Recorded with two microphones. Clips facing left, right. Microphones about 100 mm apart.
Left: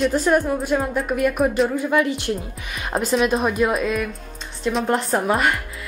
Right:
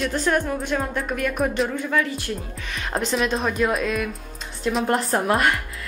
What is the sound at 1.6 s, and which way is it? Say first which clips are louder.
Speech: left 4 dB; 15° left (ahead or behind).